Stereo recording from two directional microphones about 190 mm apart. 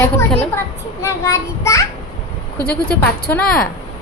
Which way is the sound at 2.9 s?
5° left (ahead or behind).